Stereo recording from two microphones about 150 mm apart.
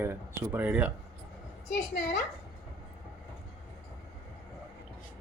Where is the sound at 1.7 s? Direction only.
60° left (ahead or behind).